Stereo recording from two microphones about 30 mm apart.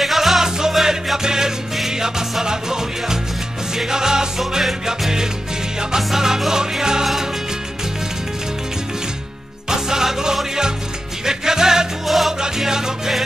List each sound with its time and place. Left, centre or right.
0.0 s music: centre
0.4 s music: centre
5.9 s music: centre
9.7 s music: centre
12.1 s music: centre
12.4 s music: centre